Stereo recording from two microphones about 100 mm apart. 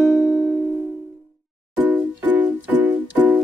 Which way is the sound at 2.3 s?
20° right (ahead or behind).